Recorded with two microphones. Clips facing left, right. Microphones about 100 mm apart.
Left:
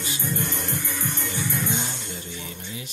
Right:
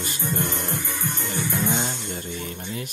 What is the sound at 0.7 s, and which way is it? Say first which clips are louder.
Music: right 1 dB; 20° right (ahead or behind).